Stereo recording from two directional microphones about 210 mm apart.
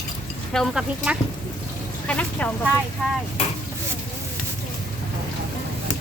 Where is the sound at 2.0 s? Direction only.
5° left (ahead or behind).